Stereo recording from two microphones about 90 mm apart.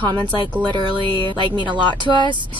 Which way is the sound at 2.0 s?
55° right (ahead or behind).